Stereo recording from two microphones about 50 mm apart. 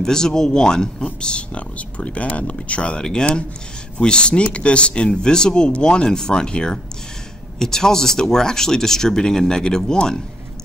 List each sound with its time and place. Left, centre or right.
0.0 s speech: centre